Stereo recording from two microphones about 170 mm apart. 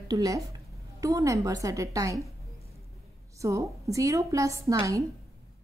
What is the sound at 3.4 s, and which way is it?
A woman's voice, 20° right (ahead or behind).